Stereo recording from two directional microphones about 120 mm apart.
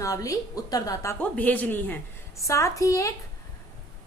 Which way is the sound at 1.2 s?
15° left (ahead or behind).